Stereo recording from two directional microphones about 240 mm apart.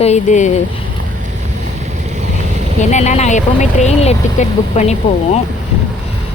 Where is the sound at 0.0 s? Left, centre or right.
Left.